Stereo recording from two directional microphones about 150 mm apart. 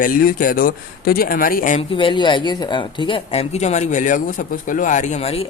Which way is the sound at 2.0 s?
35° left (ahead or behind).